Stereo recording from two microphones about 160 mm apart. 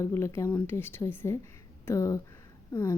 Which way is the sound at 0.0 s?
15° left (ahead or behind).